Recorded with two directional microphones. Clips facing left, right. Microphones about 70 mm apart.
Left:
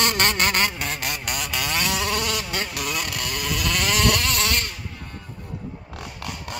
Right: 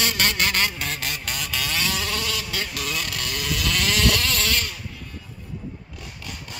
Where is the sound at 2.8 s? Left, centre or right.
Centre.